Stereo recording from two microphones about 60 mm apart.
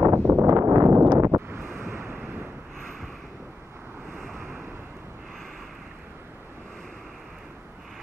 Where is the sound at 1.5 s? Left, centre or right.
Right.